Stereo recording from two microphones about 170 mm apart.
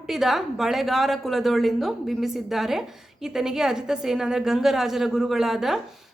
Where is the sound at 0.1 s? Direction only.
Centre (ahead or behind).